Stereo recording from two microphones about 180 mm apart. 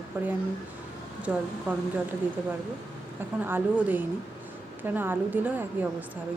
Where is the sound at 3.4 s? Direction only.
10° right (ahead or behind).